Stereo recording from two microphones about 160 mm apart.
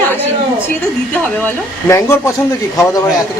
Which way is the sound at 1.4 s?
15° left (ahead or behind).